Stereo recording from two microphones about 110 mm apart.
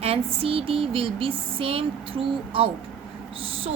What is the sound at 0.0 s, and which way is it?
Speech, 60° right (ahead or behind).